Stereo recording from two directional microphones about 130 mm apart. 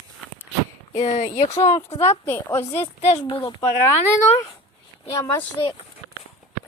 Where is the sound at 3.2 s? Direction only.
30° left (ahead or behind).